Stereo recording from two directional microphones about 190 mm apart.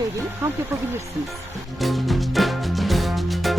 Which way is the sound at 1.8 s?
Centre (ahead or behind).